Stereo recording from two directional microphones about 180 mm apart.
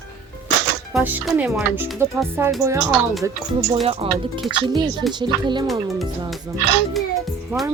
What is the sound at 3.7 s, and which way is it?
Speech, 30° right (ahead or behind).